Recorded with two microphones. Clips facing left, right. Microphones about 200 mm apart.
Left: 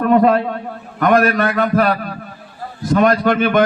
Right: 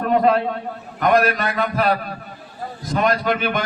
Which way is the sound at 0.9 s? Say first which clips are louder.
Left 3 dB; 50° left (ahead or behind).